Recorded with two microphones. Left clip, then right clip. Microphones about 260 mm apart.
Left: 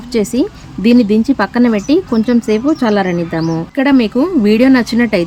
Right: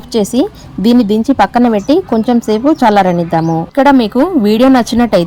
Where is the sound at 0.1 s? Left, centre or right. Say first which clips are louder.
Right 2 dB; centre.